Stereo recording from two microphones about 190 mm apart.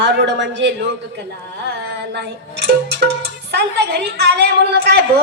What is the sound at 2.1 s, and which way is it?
A woman's voice, 60° right (ahead or behind).